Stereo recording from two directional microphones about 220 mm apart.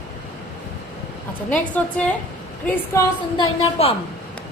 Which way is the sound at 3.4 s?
25° left (ahead or behind).